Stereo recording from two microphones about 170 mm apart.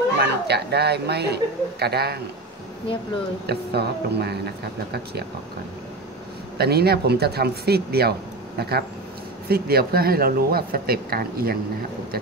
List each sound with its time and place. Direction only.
0.2 s speech: 75° right (ahead or behind)
3.4 s speech: 75° right (ahead or behind)
6.6 s speech: 70° right (ahead or behind)